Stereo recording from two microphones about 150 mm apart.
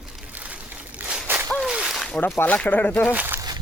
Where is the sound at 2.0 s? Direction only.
10° left (ahead or behind).